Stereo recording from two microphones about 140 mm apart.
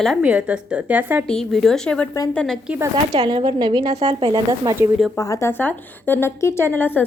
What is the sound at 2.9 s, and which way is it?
Speech, 35° right (ahead or behind).